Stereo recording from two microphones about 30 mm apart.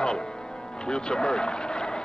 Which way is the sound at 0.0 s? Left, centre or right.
Left.